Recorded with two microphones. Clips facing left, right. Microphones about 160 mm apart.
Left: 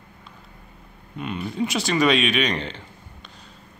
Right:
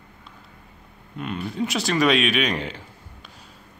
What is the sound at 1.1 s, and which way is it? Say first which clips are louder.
Speech: even; centre (ahead or behind).